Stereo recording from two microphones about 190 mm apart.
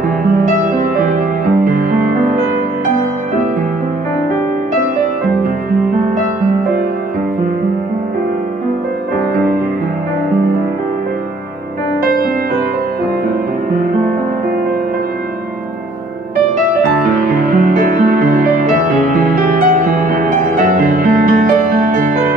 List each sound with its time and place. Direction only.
0.3 s music: 50° right (ahead or behind)
17.3 s music: 50° right (ahead or behind)